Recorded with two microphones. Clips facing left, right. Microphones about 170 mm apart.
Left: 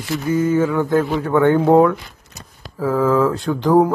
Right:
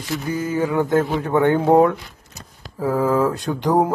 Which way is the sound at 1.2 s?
20° right (ahead or behind).